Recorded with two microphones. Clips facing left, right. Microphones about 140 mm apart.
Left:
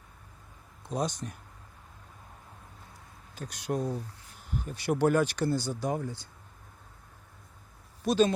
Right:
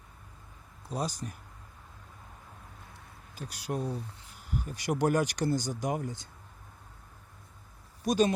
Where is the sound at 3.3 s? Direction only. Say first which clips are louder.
Left 3 dB; 10° right (ahead or behind).